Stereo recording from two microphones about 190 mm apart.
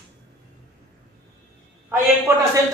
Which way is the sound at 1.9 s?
15° right (ahead or behind).